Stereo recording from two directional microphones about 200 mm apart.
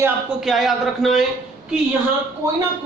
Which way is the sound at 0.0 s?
Centre (ahead or behind).